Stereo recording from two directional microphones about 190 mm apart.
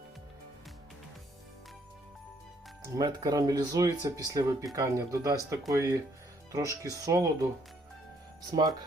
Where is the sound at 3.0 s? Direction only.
20° right (ahead or behind).